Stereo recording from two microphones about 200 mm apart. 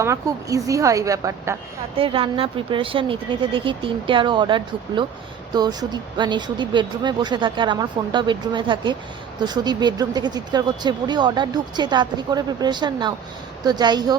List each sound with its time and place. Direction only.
0.0 s a woman's voice: 15° right (ahead or behind)
2.0 s speech: 25° right (ahead or behind)